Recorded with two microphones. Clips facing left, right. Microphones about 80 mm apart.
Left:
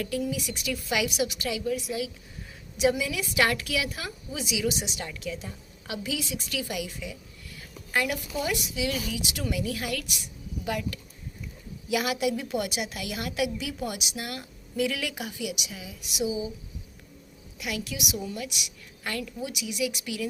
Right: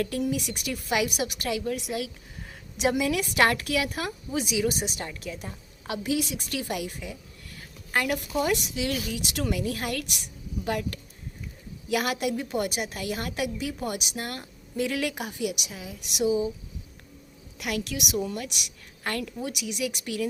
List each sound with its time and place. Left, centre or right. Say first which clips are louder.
0.0 s a woman's voice: right 2 dB; right
1.7 s a woman's voice: left 1 dB; right
6.0 s a woman's voice: right 5 dB; right
17.6 s a woman's voice: right 3 dB; right